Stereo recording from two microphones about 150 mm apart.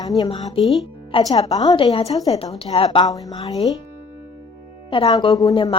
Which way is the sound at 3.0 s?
25° left (ahead or behind).